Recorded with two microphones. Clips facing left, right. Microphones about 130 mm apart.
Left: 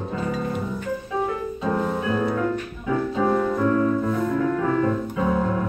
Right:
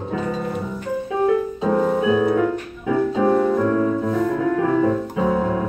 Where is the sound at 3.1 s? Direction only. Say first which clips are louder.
Right 3 dB; 25° right (ahead or behind).